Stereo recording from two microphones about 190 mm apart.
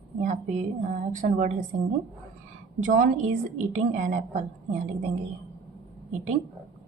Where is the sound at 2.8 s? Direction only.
45° right (ahead or behind).